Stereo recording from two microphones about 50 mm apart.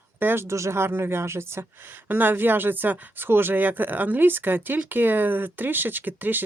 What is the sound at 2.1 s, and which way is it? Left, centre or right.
Speech, right.